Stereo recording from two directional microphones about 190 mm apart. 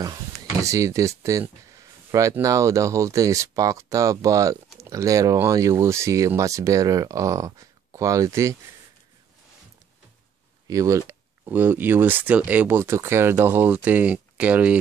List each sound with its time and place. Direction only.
0.0 s speech: 20° right (ahead or behind)
10.7 s speech: 15° right (ahead or behind)